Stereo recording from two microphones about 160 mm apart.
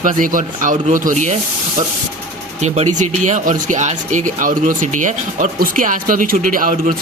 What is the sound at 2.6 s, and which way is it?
Speech, 45° right (ahead or behind).